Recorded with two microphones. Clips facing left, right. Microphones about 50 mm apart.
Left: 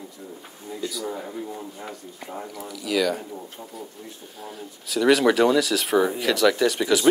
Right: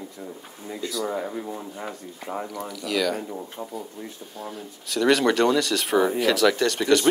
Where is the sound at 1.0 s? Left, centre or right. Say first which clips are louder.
Right 3 dB; right.